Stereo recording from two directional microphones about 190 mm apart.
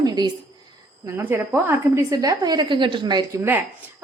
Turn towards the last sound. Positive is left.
turn(degrees=-15)  # may be behind; listen again after turning